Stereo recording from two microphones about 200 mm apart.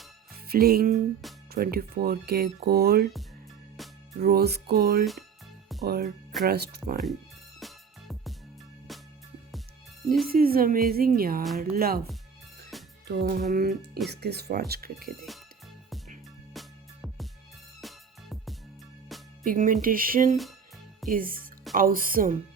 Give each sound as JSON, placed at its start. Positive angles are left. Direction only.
{"t": 0.3, "sound": "a woman's voice", "side_deg": -50}
{"t": 3.8, "sound": "music", "side_deg": 0}
{"t": 4.2, "sound": "a woman's voice", "side_deg": -50}
{"t": 7.6, "sound": "music", "side_deg": 0}
{"t": 10.2, "sound": "a woman's voice", "side_deg": -50}
{"t": 12.7, "sound": "music", "side_deg": 0}
{"t": 13.1, "sound": "a woman's voice", "side_deg": -55}
{"t": 16.6, "sound": "music", "side_deg": 0}
{"t": 19.5, "sound": "a woman's voice", "side_deg": -45}